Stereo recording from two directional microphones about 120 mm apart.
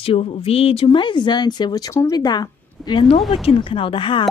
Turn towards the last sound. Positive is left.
turn(degrees=45)  # may be behind; listen again after turning